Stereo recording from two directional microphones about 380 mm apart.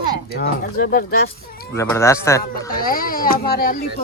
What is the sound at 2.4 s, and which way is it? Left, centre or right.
Speech, left.